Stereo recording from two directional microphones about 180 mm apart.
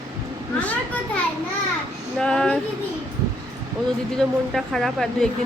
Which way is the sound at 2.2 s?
5° left (ahead or behind).